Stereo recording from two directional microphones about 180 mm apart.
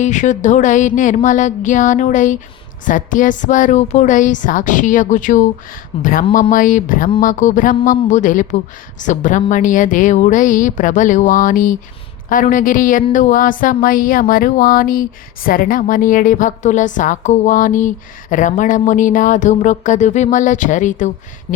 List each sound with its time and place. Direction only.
0.0 s a woman's voice: 45° left (ahead or behind)